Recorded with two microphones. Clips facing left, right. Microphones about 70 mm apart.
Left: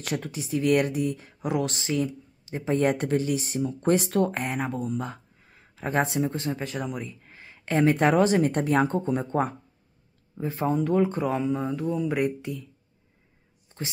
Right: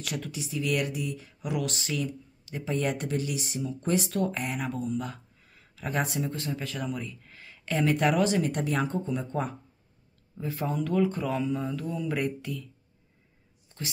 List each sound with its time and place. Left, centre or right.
0.0 s speech: left
10.3 s speech: left